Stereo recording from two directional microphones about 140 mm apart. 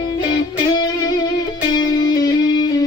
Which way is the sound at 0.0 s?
30° left (ahead or behind).